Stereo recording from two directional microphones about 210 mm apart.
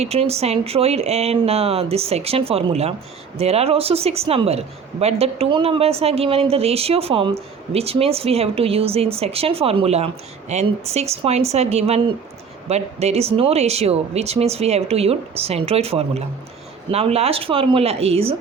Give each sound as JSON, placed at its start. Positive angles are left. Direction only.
{"t": 0.0, "sound": "a woman's voice", "side_deg": -30}